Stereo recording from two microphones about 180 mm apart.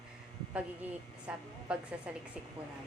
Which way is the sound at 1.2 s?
5° right (ahead or behind).